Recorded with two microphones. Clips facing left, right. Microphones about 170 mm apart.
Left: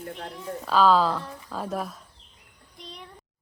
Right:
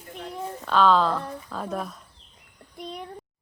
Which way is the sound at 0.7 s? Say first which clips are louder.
Even; 5° left (ahead or behind).